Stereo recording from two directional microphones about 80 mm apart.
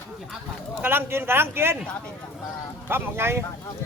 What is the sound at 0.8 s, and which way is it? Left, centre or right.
A man's voice, right.